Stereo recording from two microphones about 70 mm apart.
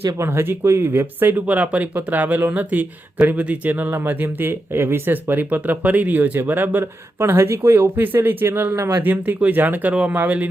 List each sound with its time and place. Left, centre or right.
0.0 s speech: right
8.7 s speech: right
9.0 s speech: right